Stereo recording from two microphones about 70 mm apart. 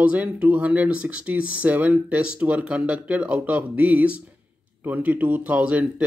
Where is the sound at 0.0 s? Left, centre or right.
Centre.